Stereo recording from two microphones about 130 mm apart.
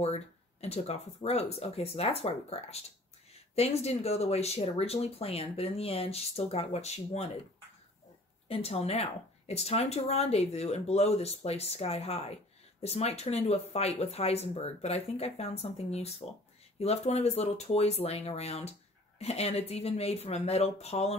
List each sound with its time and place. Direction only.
0.0 s speech: 55° left (ahead or behind)
8.5 s speech: 50° left (ahead or behind)